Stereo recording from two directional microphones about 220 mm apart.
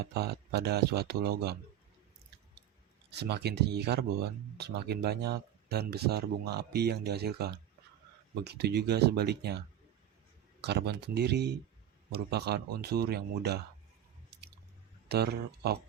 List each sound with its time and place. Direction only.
0.0 s speech: 45° right (ahead or behind)
3.1 s speech: 50° right (ahead or behind)
15.1 s speech: 50° right (ahead or behind)